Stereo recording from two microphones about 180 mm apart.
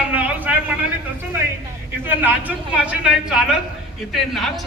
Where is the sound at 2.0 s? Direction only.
10° right (ahead or behind).